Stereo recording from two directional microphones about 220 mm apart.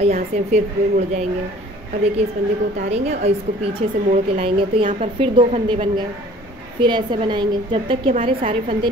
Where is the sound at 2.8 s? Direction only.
30° right (ahead or behind).